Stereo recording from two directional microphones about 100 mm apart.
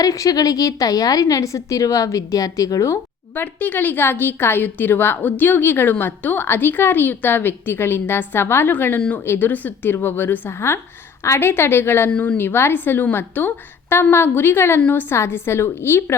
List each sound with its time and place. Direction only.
0.0 s a woman's voice: 35° left (ahead or behind)
12.1 s speech: 10° left (ahead or behind)
12.4 s a woman's voice: 25° left (ahead or behind)
15.1 s a woman's voice: 25° left (ahead or behind)